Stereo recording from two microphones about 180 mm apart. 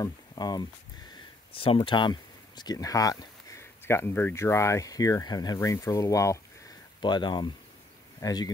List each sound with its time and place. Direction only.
0.0 s speech: 20° left (ahead or behind)